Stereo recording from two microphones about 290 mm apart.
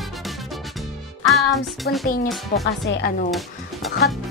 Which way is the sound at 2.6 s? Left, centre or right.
Left.